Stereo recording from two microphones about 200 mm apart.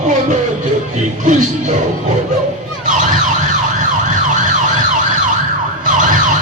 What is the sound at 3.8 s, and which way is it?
Emergency vehicle, 40° right (ahead or behind).